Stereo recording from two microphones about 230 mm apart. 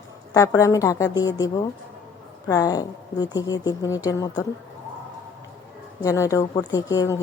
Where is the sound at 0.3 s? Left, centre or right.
Centre.